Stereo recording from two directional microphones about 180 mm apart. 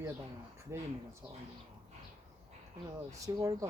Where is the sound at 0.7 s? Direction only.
15° right (ahead or behind).